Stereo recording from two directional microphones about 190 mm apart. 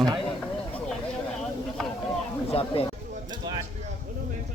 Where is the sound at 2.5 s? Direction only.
30° left (ahead or behind).